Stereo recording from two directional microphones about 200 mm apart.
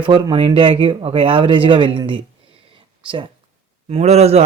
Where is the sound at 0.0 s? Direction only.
25° right (ahead or behind).